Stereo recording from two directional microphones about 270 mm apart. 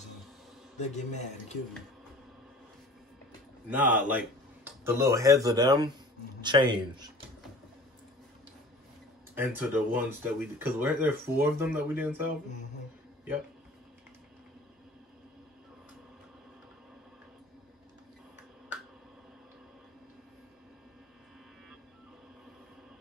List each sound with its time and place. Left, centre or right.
0.7 s speech: left
3.6 s speech: centre
9.5 s speech: centre